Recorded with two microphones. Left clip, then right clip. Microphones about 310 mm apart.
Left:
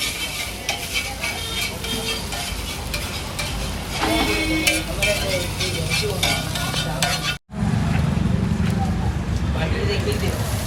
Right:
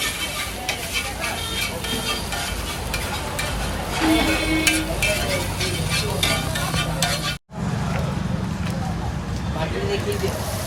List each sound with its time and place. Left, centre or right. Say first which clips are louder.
0.7 s stir: left 2 dB; centre
3.9 s music: right 1 dB; centre